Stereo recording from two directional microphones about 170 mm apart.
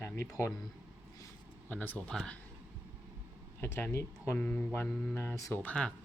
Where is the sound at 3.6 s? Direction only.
15° left (ahead or behind).